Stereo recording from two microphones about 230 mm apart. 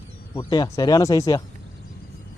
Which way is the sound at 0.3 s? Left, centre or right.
Centre.